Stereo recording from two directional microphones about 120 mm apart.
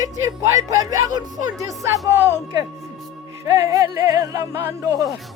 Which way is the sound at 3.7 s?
30° right (ahead or behind).